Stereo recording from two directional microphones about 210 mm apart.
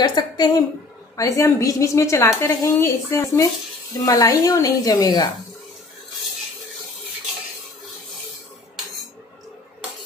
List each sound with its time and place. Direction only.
0.0 s a woman's voice: 20° left (ahead or behind)